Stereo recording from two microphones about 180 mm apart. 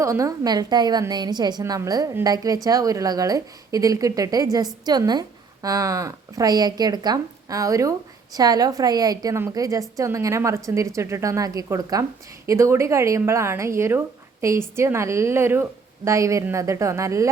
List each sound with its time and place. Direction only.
0.0 s a woman's voice: 15° right (ahead or behind)